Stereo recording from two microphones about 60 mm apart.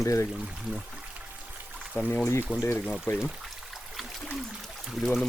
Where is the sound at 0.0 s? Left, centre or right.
Left.